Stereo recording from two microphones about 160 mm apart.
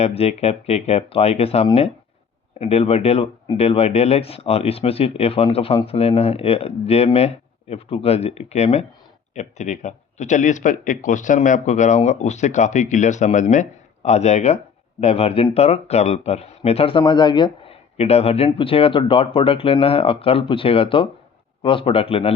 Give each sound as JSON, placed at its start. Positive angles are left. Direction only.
{"t": 0.0, "sound": "speech", "side_deg": 40}
{"t": 17.9, "sound": "speech", "side_deg": 40}